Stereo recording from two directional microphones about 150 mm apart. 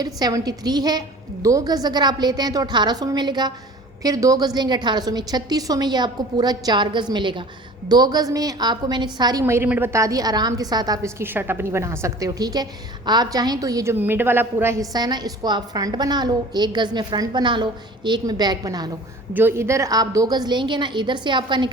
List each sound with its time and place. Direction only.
0.0 s a woman's voice: 25° right (ahead or behind)
9.4 s a woman's voice: 15° right (ahead or behind)
19.3 s a woman's voice: 15° right (ahead or behind); by 21.7 s 30° right (ahead or behind)